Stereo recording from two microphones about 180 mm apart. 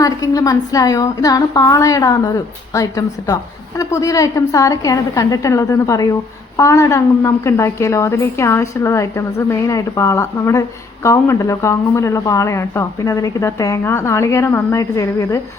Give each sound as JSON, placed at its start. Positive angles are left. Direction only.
{"t": 0.0, "sound": "a woman's voice", "side_deg": 20}